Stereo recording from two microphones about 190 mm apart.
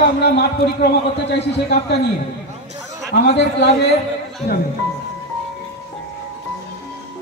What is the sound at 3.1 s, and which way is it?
Speech, 60° left (ahead or behind).